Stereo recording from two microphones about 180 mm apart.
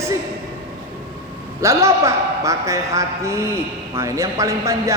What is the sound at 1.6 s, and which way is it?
A man's voice, 15° right (ahead or behind).